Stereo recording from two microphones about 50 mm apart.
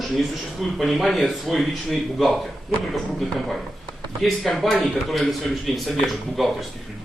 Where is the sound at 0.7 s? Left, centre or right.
Centre.